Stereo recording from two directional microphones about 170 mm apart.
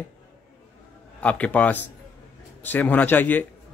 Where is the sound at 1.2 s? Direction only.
5° left (ahead or behind).